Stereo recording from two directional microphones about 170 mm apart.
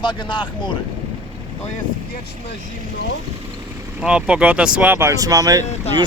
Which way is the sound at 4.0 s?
5° right (ahead or behind).